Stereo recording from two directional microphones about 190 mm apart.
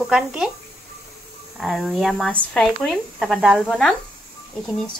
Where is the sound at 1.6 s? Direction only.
Centre (ahead or behind).